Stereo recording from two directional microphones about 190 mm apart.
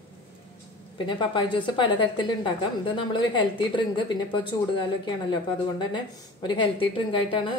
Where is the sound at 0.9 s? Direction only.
25° left (ahead or behind).